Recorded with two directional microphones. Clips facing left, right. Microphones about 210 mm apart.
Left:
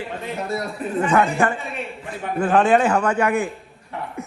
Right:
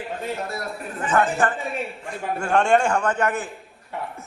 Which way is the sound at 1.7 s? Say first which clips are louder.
Right 1 dB; 5° left (ahead or behind).